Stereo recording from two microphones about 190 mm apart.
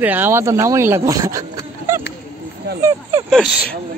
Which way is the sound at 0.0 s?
10° right (ahead or behind).